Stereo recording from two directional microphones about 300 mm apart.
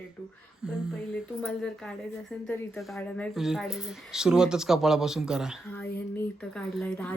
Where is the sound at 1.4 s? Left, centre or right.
Centre.